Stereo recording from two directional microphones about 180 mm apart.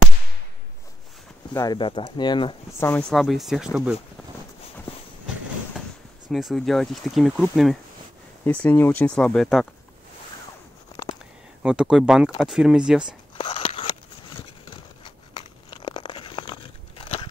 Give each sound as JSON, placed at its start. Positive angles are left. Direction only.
{"t": 1.5, "sound": "speech", "side_deg": 20}
{"t": 2.8, "sound": "speech", "side_deg": 5}
{"t": 6.3, "sound": "speech", "side_deg": 0}
{"t": 8.5, "sound": "speech", "side_deg": 10}
{"t": 11.6, "sound": "speech", "side_deg": -5}
{"t": 13.4, "sound": "a sound", "side_deg": 30}
{"t": 15.0, "sound": "crushing", "side_deg": 25}